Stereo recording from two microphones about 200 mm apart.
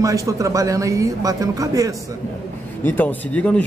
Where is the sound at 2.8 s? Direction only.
10° left (ahead or behind).